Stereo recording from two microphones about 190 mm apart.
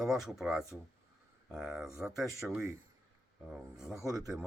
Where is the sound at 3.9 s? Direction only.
15° right (ahead or behind).